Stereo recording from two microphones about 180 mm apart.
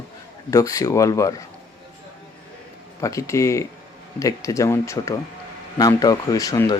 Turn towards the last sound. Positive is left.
turn(degrees=20)  # may be behind; listen again after turning